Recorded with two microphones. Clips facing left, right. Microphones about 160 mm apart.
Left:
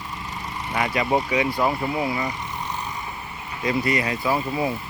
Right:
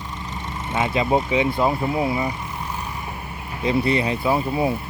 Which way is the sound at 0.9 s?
25° right (ahead or behind).